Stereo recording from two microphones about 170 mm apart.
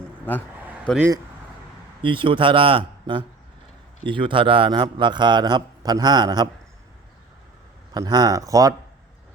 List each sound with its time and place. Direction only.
0.9 s speech: 5° left (ahead or behind)
2.0 s a man's voice: 30° right (ahead or behind)
7.9 s a man's voice: 25° right (ahead or behind)